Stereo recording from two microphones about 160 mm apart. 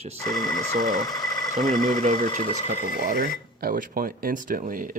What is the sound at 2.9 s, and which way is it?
Speech, 65° right (ahead or behind).